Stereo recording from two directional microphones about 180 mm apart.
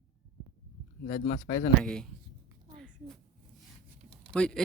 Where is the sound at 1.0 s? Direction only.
45° left (ahead or behind).